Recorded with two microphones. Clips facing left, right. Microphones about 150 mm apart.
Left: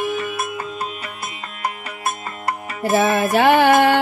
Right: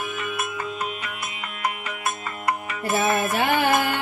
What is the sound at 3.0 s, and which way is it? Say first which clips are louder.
Music: left 6 dB; 85° left.